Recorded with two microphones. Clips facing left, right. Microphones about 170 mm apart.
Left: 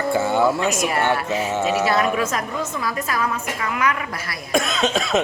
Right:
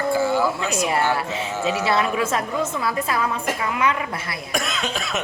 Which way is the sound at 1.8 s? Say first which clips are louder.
Left 1 dB; 25° right (ahead or behind).